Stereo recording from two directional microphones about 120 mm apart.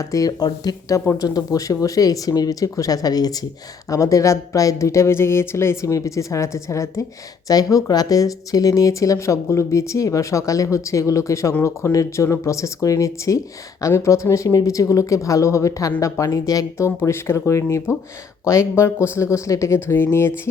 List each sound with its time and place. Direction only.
0.1 s speech: 30° left (ahead or behind)